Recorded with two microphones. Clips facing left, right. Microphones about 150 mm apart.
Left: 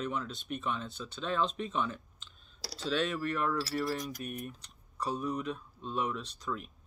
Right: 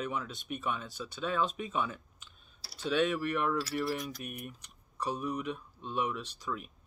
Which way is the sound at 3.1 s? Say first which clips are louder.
Right 1 dB; 15° right (ahead or behind).